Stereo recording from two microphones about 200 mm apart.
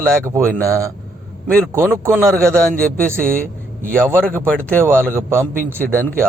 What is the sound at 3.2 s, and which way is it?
Speech, 45° right (ahead or behind).